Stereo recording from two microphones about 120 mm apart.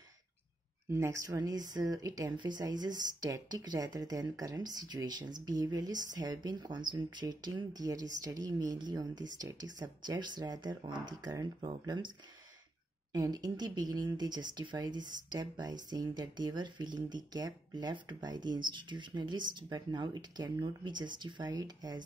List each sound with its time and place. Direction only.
0.8 s speech: 20° right (ahead or behind); by 12.1 s 40° right (ahead or behind)
13.1 s speech: 35° right (ahead or behind)